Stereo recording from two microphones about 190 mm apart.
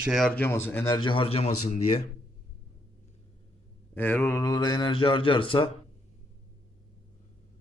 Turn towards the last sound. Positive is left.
turn(degrees=30)  # may be behind; listen again after turning